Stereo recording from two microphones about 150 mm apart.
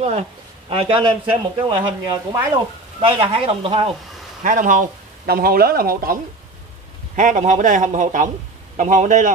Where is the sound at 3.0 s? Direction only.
35° right (ahead or behind).